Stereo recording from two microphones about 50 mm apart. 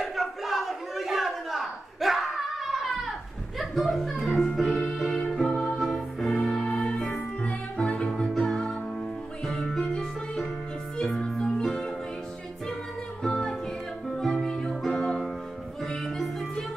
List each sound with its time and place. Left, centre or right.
0.0 s a sound: centre
4.1 s music: centre
6.7 s music: left
8.1 s music: centre
11.4 s music: centre
13.2 s music: centre